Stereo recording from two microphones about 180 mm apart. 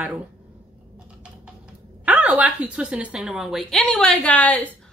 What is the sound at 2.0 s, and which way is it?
A woman's voice, 10° right (ahead or behind).